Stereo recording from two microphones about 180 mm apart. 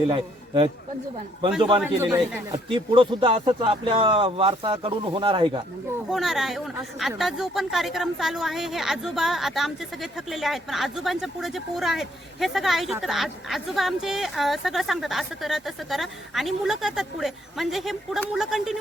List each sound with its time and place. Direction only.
0.1 s a man's voice: 25° right (ahead or behind)
1.8 s speech: 15° right (ahead or behind)
6.1 s a woman's voice: centre (ahead or behind)